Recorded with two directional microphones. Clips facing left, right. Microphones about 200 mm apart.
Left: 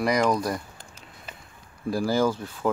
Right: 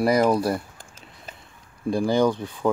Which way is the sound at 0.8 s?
45° right (ahead or behind).